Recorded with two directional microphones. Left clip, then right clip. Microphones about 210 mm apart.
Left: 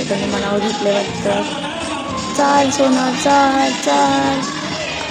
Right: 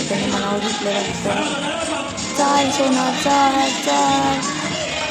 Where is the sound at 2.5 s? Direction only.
10° left (ahead or behind).